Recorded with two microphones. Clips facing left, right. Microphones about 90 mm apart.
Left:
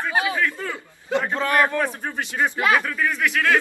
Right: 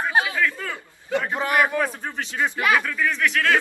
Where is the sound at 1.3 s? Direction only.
15° right (ahead or behind).